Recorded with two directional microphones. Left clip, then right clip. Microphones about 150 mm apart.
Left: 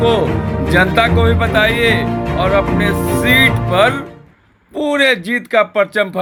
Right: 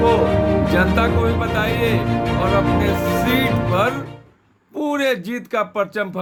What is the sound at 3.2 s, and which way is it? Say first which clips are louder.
Speech: left 7 dB; 5° left (ahead or behind).